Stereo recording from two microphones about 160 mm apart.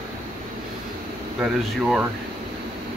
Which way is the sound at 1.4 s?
5° right (ahead or behind).